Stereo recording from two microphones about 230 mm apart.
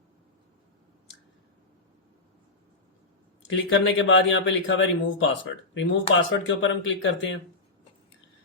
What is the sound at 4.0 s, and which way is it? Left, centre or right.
A man's voice, left.